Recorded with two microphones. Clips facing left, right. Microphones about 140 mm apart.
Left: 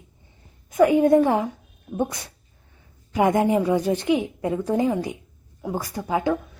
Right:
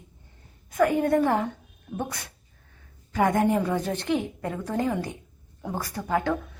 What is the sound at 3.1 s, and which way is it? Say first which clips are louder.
A woman's voice: left 3 dB; 15° left (ahead or behind).